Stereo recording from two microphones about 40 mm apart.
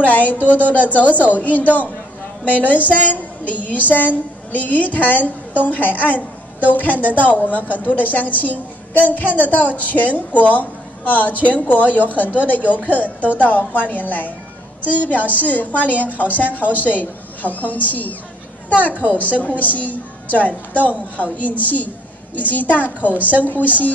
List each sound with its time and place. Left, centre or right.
0.1 s a woman's voice: left
0.4 s speech: right
0.7 s a woman's voice: left